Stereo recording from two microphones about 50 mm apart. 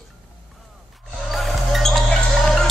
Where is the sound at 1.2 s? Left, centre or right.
Centre.